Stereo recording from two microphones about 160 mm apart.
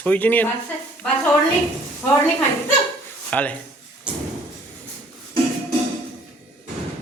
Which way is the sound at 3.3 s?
10° left (ahead or behind).